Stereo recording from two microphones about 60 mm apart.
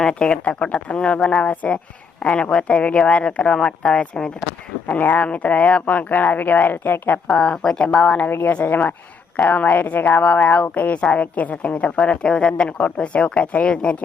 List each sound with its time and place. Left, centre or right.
0.0 s speech: centre
4.9 s speech: left
7.3 s speech: centre
8.3 s a woman's voice: left
8.5 s speech: left